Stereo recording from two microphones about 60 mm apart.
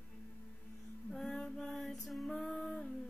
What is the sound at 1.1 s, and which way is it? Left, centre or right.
Female singing, centre.